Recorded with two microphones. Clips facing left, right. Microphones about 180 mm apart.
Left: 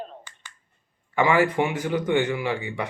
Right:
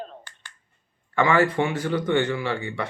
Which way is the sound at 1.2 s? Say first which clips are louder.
Even; 15° left (ahead or behind).